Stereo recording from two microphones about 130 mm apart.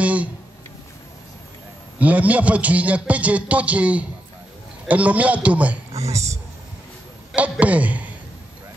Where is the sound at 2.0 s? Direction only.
10° right (ahead or behind).